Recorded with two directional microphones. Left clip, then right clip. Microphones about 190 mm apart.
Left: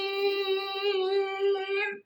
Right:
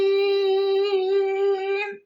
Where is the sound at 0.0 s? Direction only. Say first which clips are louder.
Right 8 dB; 20° right (ahead or behind).